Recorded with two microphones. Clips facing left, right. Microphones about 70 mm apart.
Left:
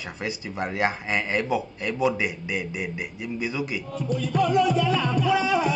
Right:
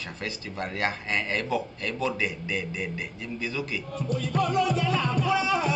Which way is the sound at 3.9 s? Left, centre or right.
Right.